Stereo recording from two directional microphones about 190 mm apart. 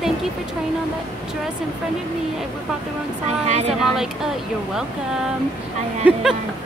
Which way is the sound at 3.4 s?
35° right (ahead or behind).